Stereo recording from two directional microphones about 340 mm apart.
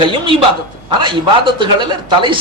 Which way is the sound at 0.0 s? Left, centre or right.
Centre.